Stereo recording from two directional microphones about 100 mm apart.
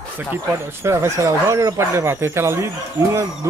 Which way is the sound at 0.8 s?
30° right (ahead or behind).